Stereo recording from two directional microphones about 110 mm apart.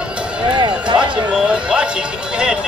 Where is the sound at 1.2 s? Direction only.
10° right (ahead or behind).